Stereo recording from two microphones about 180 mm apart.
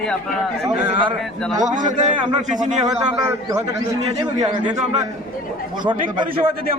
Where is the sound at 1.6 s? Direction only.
45° right (ahead or behind).